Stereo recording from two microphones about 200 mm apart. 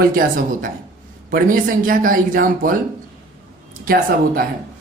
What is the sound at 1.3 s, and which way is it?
Speech, 45° right (ahead or behind).